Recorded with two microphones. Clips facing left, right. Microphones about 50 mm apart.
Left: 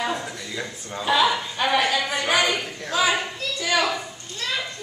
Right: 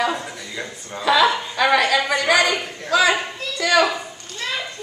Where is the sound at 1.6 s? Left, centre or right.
Right.